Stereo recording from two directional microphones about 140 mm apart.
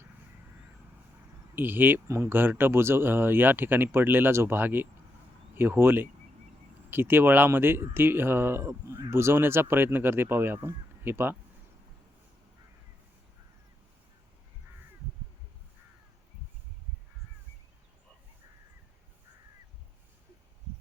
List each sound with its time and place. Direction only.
1.5 s speech: 15° right (ahead or behind)